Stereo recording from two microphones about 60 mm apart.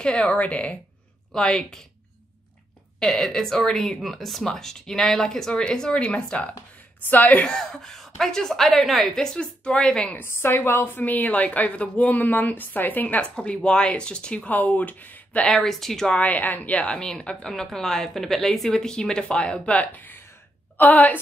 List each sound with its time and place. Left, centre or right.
0.0 s speech: left
1.3 s a woman's voice: centre
3.0 s a woman's voice: centre
7.1 s speech: left
7.4 s a woman's voice: centre
10.1 s a woman's voice: left; by 14.5 s centre
14.5 s speech: left
15.4 s a woman's voice: centre
16.1 s speech: left
16.8 s a woman's voice: centre; by 21.2 s left